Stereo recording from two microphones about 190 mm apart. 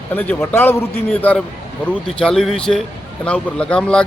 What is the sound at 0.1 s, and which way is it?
Speech, 10° left (ahead or behind).